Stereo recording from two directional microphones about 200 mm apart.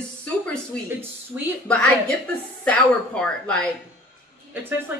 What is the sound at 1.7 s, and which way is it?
A woman's voice, 5° left (ahead or behind).